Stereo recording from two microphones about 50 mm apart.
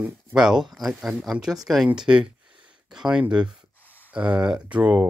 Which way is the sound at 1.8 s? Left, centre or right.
Centre.